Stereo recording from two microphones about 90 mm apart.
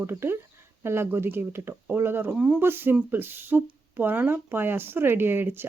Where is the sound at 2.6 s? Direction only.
25° right (ahead or behind).